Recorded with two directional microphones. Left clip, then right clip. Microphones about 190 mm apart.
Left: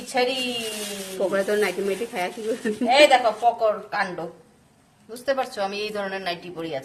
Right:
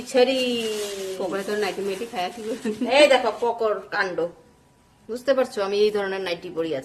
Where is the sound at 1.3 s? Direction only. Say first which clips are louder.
Left 5 dB; 20° left (ahead or behind).